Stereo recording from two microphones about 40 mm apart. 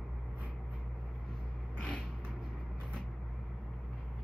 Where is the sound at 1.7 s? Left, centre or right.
Left.